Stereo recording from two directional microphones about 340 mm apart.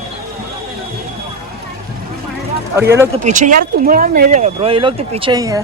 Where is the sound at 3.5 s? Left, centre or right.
Right.